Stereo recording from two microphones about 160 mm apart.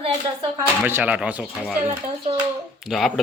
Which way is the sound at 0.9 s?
10° right (ahead or behind).